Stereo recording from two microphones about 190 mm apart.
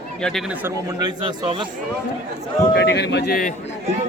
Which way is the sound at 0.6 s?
20° right (ahead or behind).